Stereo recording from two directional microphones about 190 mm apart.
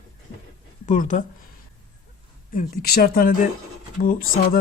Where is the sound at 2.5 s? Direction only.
50° left (ahead or behind).